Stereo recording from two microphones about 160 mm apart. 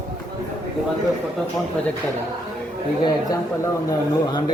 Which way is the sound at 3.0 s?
20° left (ahead or behind).